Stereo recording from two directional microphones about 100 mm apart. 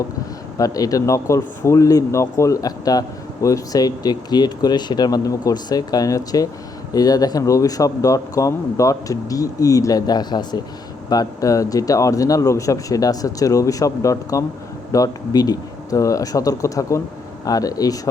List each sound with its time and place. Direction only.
0.5 s speech: 35° left (ahead or behind)